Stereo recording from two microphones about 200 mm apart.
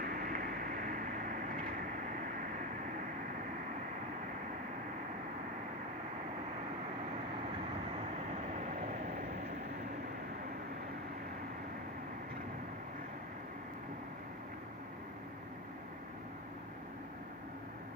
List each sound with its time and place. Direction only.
0.0 s vehicle: 45° right (ahead or behind)